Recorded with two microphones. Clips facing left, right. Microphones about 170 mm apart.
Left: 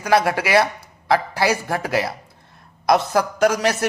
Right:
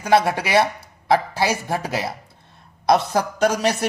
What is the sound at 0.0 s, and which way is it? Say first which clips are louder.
Speech: even; 25° right (ahead or behind).